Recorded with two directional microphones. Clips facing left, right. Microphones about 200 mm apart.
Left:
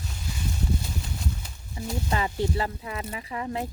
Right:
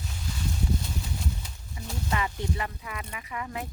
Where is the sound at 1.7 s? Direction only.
30° left (ahead or behind).